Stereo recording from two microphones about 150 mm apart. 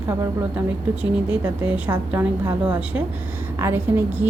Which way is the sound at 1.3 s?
10° right (ahead or behind).